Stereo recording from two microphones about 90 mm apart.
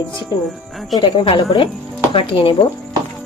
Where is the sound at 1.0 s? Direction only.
75° left (ahead or behind).